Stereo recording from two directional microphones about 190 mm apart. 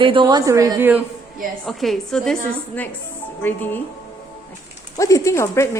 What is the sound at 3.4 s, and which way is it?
Speech, 10° left (ahead or behind).